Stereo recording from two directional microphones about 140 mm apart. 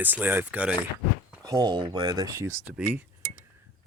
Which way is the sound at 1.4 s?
30° right (ahead or behind).